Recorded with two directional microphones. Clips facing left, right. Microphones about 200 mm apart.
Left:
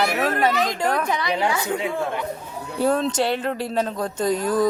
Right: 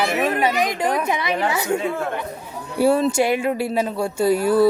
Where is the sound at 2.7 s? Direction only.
10° right (ahead or behind).